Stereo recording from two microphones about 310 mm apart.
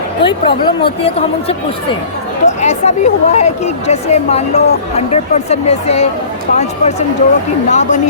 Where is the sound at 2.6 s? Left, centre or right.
Left.